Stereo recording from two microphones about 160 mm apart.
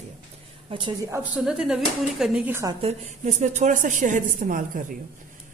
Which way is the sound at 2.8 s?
45° right (ahead or behind).